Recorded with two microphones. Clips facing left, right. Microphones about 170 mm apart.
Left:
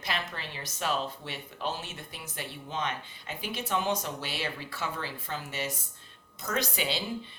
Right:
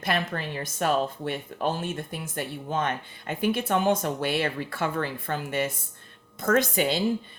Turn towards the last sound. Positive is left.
turn(degrees=-50)  # may be behind; listen again after turning